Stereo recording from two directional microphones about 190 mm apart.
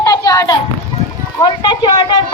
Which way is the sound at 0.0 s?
15° left (ahead or behind).